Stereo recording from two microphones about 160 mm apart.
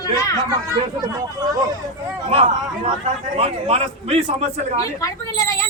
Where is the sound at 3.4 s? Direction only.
40° right (ahead or behind).